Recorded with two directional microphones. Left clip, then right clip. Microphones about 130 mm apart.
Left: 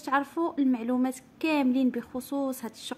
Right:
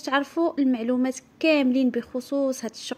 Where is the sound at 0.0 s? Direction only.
20° right (ahead or behind).